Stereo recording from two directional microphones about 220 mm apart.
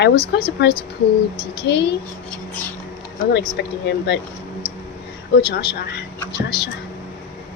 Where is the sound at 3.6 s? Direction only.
50° left (ahead or behind).